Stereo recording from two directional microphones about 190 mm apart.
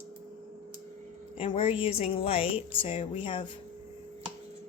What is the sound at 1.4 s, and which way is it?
Speech, 30° left (ahead or behind).